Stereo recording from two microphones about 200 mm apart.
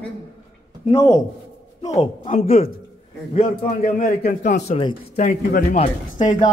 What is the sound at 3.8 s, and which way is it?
Speech, 45° left (ahead or behind).